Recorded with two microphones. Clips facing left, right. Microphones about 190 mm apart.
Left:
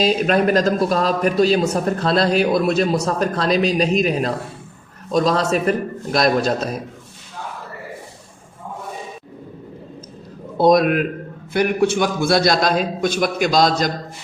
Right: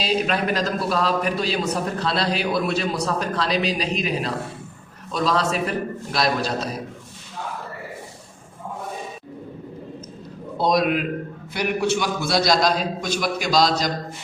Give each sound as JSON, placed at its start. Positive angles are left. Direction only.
{"t": 0.0, "sound": "a man's voice", "side_deg": 45}
{"t": 10.6, "sound": "a man's voice", "side_deg": 50}